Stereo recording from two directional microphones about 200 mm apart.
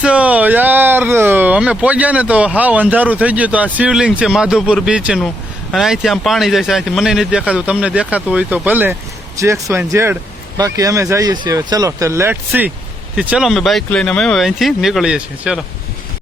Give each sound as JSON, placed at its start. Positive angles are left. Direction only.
{"t": 0.0, "sound": "speech", "side_deg": -5}